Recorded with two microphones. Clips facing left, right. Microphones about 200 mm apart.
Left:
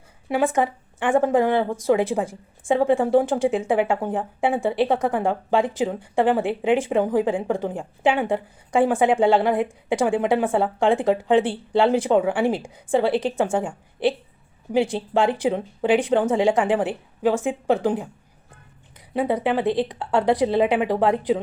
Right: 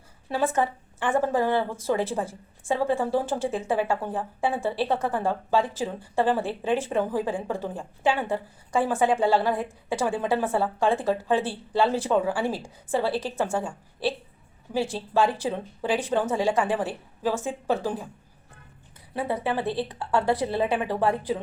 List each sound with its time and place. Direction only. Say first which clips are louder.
0.3 s a woman's voice: left 4 dB; 15° left (ahead or behind)
19.1 s a woman's voice: left 6 dB; 20° left (ahead or behind)